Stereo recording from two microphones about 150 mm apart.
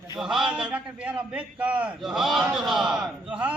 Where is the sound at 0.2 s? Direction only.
Centre (ahead or behind).